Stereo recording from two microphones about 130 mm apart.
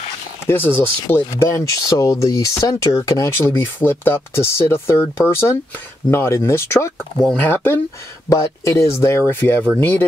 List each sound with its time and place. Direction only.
0.5 s speech: 15° left (ahead or behind)